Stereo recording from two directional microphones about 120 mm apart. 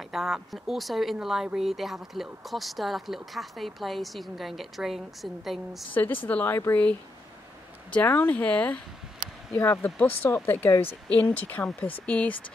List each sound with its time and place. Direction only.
0.0 s speech: centre (ahead or behind)
6.2 s speech: 15° left (ahead or behind)